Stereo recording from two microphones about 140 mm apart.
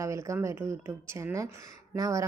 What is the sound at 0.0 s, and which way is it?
A woman's voice, 20° right (ahead or behind).